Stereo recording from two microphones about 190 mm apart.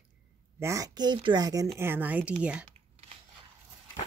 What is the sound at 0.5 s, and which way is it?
Speech, 15° right (ahead or behind).